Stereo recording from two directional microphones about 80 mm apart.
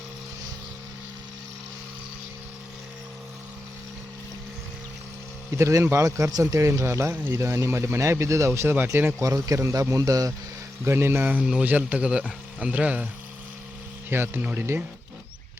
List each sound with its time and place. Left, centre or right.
5.5 s speech: right
8.7 s speech: right
9.2 s speech: right
10.8 s speech: right
11.4 s speech: centre
14.1 s speech: right